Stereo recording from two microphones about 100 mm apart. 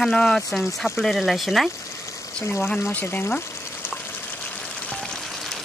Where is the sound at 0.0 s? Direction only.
5° left (ahead or behind).